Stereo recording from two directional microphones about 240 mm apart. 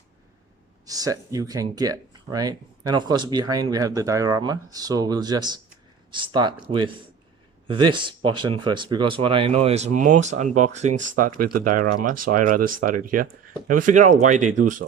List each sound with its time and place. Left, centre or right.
0.9 s speech: centre; by 14.8 s right